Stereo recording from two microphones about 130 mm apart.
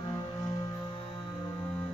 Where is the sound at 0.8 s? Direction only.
35° left (ahead or behind).